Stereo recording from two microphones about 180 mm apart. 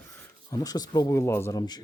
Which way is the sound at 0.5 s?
20° left (ahead or behind).